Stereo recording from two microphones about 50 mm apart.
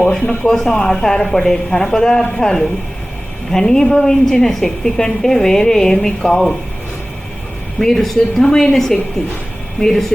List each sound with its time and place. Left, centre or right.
0.1 s a woman's voice: centre
7.8 s a woman's voice: centre